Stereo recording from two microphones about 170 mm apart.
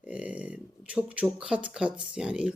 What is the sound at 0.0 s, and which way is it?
Speech, 5° right (ahead or behind).